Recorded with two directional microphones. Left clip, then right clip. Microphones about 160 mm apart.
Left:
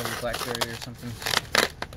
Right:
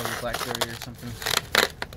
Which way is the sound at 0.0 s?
Centre (ahead or behind).